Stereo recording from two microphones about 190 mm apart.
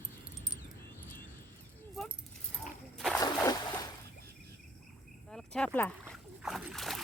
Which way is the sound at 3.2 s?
20° left (ahead or behind).